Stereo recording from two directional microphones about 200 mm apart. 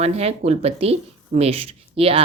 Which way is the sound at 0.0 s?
30° right (ahead or behind).